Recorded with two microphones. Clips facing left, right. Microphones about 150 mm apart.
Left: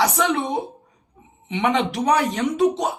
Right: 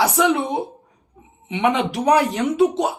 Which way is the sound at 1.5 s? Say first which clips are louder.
Right 1 dB; 5° right (ahead or behind).